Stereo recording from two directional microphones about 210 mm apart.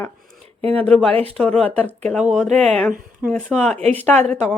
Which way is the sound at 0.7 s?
5° left (ahead or behind).